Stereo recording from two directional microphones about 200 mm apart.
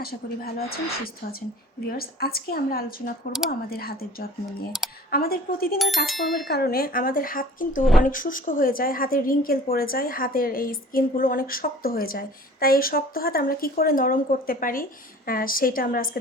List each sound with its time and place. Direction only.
0.0 s a woman's voice: 50° left (ahead or behind)
5.8 s bicycle bell: centre (ahead or behind)
6.5 s a woman's voice: 50° left (ahead or behind)